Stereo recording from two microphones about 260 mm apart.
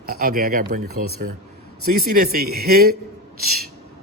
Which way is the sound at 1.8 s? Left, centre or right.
Right.